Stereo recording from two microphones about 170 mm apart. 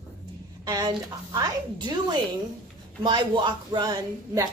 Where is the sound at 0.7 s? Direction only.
20° right (ahead or behind).